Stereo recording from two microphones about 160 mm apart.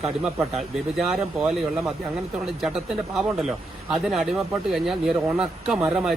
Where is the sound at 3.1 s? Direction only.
5° right (ahead or behind).